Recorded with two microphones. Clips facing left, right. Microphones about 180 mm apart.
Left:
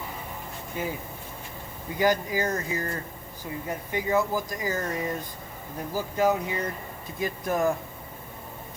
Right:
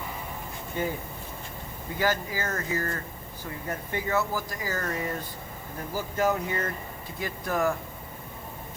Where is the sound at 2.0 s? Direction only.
20° left (ahead or behind).